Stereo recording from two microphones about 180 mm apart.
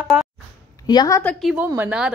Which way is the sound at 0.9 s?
20° left (ahead or behind).